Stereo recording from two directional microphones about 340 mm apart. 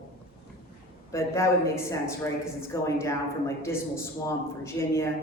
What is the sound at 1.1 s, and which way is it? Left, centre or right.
Speech, centre.